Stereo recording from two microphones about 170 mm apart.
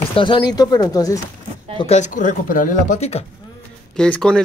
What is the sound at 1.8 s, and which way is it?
Speech, 40° left (ahead or behind).